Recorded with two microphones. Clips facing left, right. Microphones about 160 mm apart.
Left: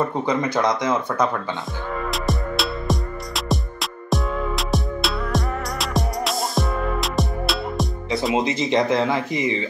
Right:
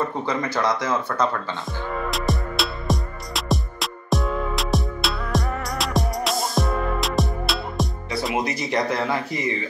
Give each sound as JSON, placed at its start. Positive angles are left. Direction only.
{"t": 0.1, "sound": "speech", "side_deg": 20}
{"t": 2.0, "sound": "music", "side_deg": 0}
{"t": 8.4, "sound": "speech", "side_deg": 20}